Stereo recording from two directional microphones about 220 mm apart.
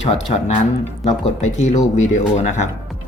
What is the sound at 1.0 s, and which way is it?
Speech, 30° left (ahead or behind).